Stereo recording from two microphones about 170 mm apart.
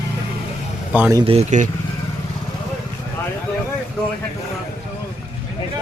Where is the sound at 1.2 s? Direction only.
35° right (ahead or behind).